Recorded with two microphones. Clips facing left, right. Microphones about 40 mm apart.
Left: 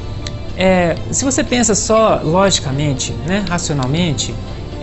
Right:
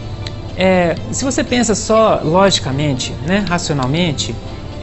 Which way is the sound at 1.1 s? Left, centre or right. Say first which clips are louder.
Left 1 dB; left.